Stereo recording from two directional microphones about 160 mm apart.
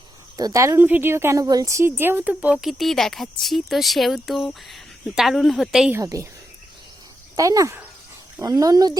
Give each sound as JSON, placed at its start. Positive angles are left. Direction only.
{"t": 0.3, "sound": "a woman's voice", "side_deg": -20}
{"t": 5.9, "sound": "speech", "side_deg": -20}
{"t": 7.3, "sound": "speech", "side_deg": -20}